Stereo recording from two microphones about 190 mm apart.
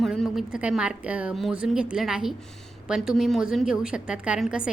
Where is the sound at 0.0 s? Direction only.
Centre (ahead or behind).